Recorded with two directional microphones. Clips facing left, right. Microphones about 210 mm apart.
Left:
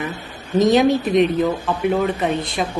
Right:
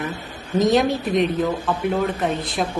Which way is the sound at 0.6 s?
Centre (ahead or behind).